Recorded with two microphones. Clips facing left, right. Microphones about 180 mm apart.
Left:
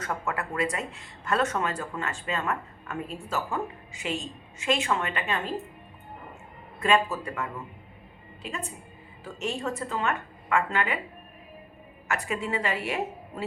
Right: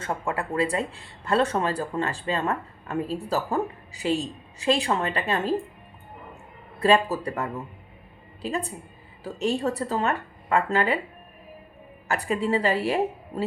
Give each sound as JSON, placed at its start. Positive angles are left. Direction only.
{"t": 0.0, "sound": "speech", "side_deg": -30}
{"t": 6.7, "sound": "speech", "side_deg": -35}
{"t": 12.0, "sound": "speech", "side_deg": -35}